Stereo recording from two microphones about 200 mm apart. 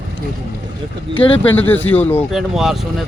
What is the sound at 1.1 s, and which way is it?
Speech, 25° left (ahead or behind).